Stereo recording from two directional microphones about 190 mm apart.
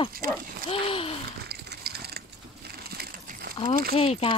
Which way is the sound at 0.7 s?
30° left (ahead or behind).